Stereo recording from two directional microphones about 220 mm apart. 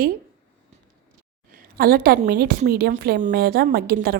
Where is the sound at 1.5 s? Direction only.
40° right (ahead or behind).